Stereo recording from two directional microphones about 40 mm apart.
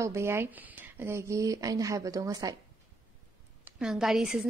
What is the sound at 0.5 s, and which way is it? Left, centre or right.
Speech, right.